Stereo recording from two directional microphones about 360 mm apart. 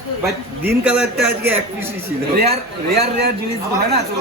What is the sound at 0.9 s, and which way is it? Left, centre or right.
A man's voice, centre.